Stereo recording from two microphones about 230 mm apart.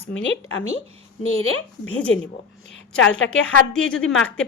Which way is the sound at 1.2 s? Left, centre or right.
Left.